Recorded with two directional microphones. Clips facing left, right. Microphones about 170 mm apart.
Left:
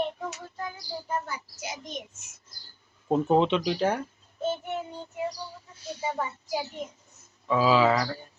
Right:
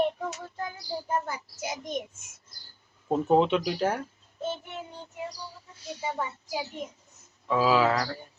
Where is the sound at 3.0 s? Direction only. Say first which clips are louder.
Even; 5° right (ahead or behind).